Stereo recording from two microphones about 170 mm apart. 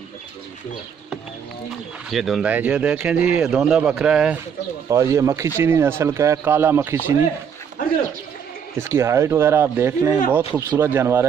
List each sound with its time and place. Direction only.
2.0 s speech: centre (ahead or behind)
4.8 s speech: 20° right (ahead or behind)
8.7 s speech: 15° right (ahead or behind)